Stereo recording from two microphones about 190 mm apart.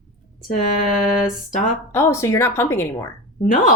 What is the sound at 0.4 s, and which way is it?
Speech, 45° left (ahead or behind).